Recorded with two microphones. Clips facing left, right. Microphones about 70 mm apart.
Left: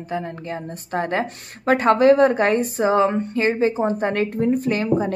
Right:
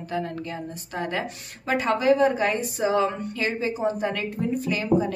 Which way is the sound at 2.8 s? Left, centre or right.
Left.